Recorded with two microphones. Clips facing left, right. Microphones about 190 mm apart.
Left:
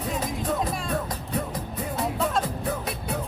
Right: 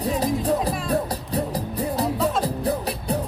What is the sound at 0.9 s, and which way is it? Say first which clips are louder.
Music: right 5 dB; 35° right (ahead or behind).